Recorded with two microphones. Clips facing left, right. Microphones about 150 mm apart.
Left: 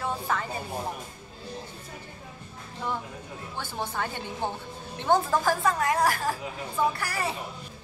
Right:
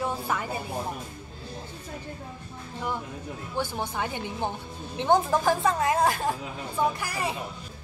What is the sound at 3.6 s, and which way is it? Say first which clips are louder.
A woman's voice: right 2 dB; 15° right (ahead or behind).